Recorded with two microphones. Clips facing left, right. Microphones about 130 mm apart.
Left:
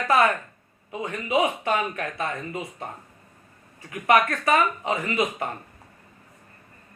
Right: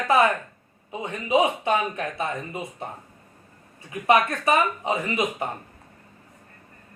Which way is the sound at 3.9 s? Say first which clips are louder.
Even; 20° right (ahead or behind).